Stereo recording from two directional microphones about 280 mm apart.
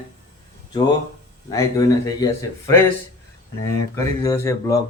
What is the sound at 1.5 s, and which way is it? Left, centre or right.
Speech, centre.